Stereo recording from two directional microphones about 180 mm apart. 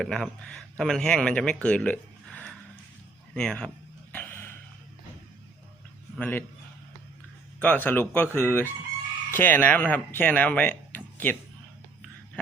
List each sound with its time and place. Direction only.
0.0 s a man's voice: 5° left (ahead or behind)
4.1 s a sound: 10° left (ahead or behind)
6.1 s speech: 10° left (ahead or behind)
7.6 s speech: 10° left (ahead or behind)